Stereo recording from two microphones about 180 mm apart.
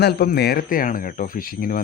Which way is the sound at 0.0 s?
60° left (ahead or behind).